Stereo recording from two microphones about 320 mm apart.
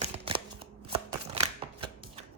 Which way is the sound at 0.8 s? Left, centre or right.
Centre.